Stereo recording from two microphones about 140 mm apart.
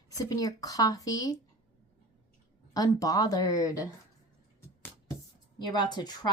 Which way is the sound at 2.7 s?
25° left (ahead or behind).